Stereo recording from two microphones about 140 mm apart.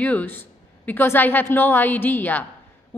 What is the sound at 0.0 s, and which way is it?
A woman's voice, 10° left (ahead or behind).